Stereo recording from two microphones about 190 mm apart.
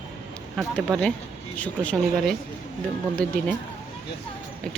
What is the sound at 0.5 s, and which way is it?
Speech, 5° left (ahead or behind).